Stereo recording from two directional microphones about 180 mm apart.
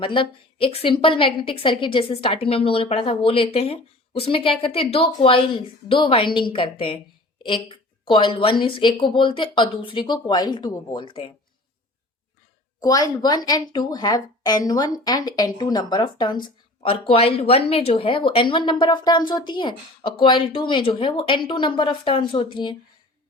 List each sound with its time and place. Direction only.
0.0 s speech: 30° left (ahead or behind)
12.8 s speech: 20° left (ahead or behind)